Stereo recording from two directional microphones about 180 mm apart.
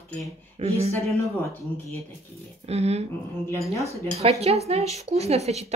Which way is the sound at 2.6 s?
35° right (ahead or behind).